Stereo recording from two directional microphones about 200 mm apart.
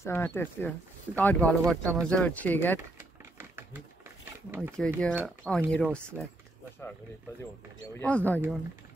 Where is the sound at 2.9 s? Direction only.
10° right (ahead or behind).